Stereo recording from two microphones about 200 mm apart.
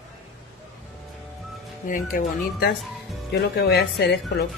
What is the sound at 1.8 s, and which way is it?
Speech, 40° left (ahead or behind).